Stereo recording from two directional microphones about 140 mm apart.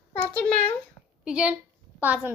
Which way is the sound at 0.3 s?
5° left (ahead or behind).